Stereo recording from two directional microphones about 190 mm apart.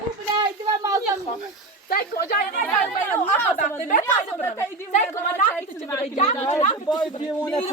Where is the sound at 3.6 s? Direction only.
45° left (ahead or behind).